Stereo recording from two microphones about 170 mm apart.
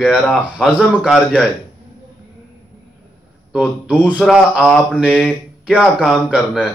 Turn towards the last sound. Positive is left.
turn(degrees=-5)  # may be behind; listen again after turning